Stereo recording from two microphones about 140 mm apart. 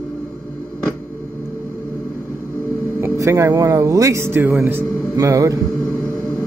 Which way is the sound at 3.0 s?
20° right (ahead or behind).